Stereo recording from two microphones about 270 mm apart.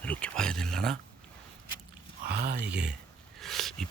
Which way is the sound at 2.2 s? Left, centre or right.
Right.